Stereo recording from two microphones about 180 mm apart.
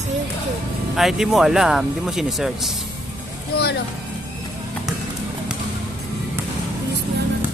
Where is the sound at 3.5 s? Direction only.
65° left (ahead or behind).